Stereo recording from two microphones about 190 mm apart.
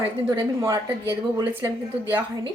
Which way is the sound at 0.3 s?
15° right (ahead or behind).